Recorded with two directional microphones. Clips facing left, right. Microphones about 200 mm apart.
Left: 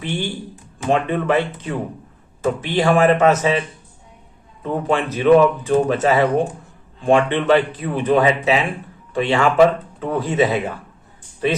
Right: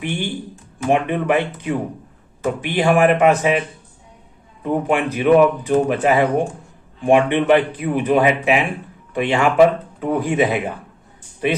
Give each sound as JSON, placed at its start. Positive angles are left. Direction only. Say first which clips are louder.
{"t": 0.0, "sound": "a man's voice", "louder": "right 1 dB", "side_deg": -15}
{"t": 4.6, "sound": "a man's voice", "louder": "right 1 dB", "side_deg": -15}